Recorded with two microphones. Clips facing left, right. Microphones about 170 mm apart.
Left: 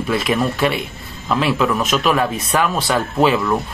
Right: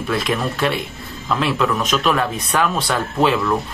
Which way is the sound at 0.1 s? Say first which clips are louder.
Left 3 dB; centre (ahead or behind).